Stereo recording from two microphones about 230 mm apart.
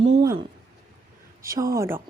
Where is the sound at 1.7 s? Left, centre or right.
Centre.